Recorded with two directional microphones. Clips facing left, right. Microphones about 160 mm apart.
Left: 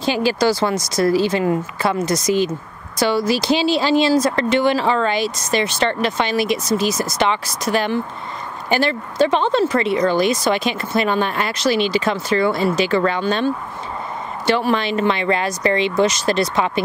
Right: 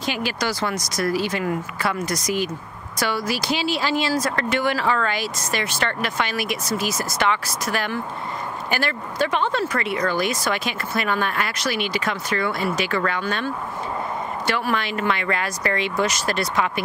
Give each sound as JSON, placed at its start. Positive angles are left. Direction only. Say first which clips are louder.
{"t": 0.0, "sound": "speech", "louder": "left 8 dB", "side_deg": 30}